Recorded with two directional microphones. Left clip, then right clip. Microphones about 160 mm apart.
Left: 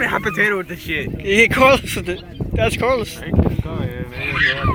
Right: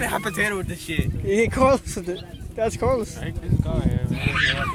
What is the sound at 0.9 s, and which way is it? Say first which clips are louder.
Speech: left 6 dB; 55° right (ahead or behind).